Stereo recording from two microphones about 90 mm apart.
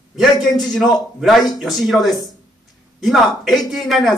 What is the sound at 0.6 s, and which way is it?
Speech, 5° left (ahead or behind).